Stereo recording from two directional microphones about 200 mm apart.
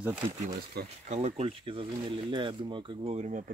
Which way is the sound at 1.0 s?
40° right (ahead or behind).